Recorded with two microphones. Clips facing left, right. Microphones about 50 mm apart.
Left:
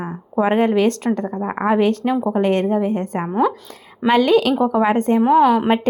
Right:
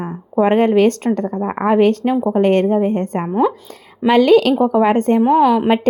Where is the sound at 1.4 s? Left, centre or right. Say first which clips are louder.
Right 2 dB; centre.